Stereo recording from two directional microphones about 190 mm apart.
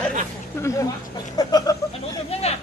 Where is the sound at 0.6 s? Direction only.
15° left (ahead or behind).